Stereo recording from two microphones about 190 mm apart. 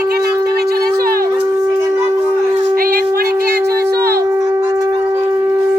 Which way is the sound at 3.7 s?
55° right (ahead or behind).